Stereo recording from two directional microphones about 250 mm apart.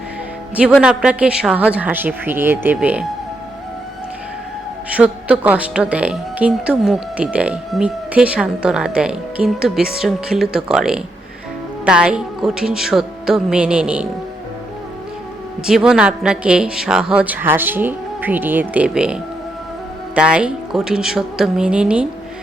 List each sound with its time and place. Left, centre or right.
0.5 s a woman's voice: centre
4.9 s a woman's voice: centre
15.6 s a woman's voice: centre